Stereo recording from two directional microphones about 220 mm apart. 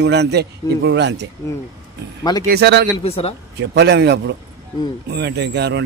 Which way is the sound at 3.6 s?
50° right (ahead or behind).